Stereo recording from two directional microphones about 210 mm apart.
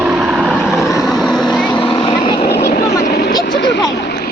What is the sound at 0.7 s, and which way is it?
Vehicle, 15° left (ahead or behind).